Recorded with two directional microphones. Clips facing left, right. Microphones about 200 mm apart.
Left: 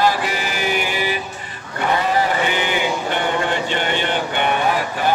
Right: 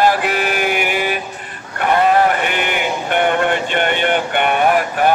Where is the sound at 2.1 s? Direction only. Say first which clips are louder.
Right 3 dB; 60° right (ahead or behind).